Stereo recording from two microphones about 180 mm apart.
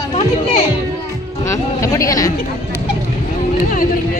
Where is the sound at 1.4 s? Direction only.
15° left (ahead or behind).